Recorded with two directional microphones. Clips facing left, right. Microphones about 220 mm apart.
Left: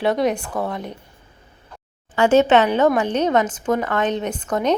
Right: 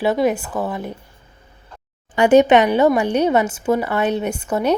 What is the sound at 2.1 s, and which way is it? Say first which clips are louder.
Speech: right 3 dB; 15° right (ahead or behind).